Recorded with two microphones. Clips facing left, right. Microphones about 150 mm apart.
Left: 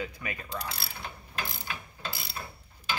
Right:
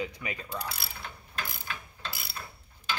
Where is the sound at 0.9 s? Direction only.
10° left (ahead or behind).